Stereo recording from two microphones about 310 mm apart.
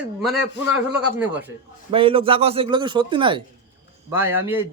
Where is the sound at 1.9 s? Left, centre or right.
Centre.